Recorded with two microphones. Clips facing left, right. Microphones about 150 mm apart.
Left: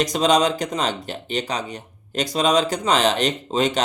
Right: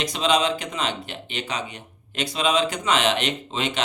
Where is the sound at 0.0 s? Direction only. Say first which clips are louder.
Left 4 dB; 40° left (ahead or behind).